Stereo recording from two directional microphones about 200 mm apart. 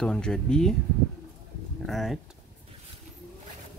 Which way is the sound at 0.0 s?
5° left (ahead or behind).